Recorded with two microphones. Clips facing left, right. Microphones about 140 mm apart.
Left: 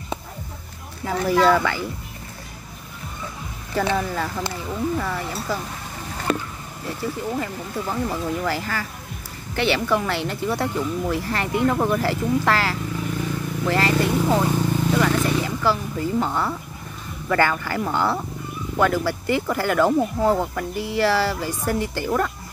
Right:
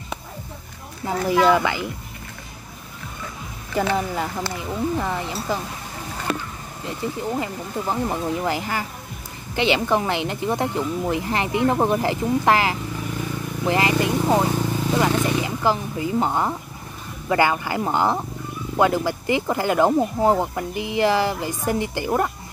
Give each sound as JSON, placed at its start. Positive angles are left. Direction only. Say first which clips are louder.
{"t": 1.0, "sound": "speech", "louder": "even", "side_deg": -20}
{"t": 3.9, "sound": "speech", "louder": "even", "side_deg": -20}
{"t": 7.0, "sound": "speech", "louder": "right 1 dB", "side_deg": -20}
{"t": 14.5, "sound": "vehicle", "louder": "left 2 dB", "side_deg": -10}
{"t": 14.9, "sound": "vehicle", "louder": "right 1 dB", "side_deg": -20}
{"t": 17.3, "sound": "speech", "louder": "right 1 dB", "side_deg": -15}